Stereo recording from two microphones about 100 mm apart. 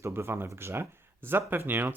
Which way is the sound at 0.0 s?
25° right (ahead or behind).